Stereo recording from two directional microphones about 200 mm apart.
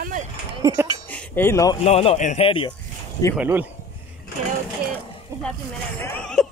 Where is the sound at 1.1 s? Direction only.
10° left (ahead or behind).